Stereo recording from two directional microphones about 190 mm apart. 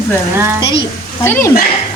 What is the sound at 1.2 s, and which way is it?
Speech, 10° left (ahead or behind).